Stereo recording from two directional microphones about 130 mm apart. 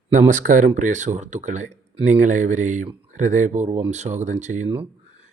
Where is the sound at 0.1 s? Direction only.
75° right (ahead or behind).